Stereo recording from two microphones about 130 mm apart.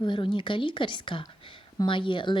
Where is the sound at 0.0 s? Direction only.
40° left (ahead or behind).